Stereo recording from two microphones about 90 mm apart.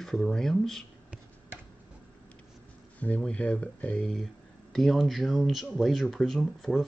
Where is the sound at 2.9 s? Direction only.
15° left (ahead or behind).